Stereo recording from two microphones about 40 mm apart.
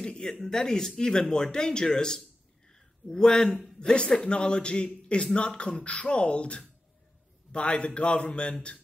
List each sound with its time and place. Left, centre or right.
0.0 s a man's voice: centre
2.7 s a sound: centre
3.9 s a man's voice: left